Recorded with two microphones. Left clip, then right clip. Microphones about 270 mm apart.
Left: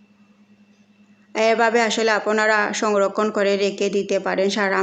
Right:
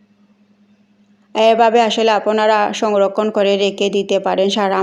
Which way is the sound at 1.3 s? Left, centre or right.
Centre.